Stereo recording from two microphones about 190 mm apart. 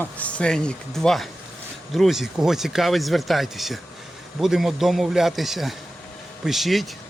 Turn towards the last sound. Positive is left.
turn(degrees=0)  # may be behind; listen again after turning